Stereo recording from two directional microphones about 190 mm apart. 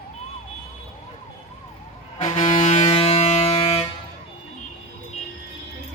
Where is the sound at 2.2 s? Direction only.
40° left (ahead or behind).